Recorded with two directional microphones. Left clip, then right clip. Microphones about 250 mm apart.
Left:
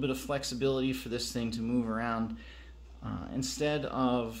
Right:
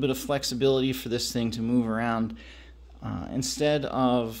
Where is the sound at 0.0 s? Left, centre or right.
Right.